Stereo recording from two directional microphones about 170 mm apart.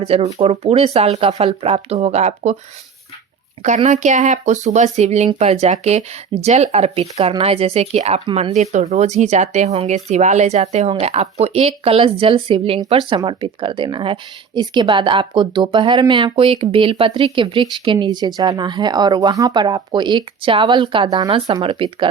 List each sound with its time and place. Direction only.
0.0 s speech: 35° right (ahead or behind)
3.8 s speech: 45° right (ahead or behind)